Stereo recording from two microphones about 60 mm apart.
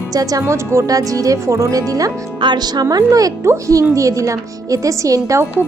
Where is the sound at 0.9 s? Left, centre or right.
Right.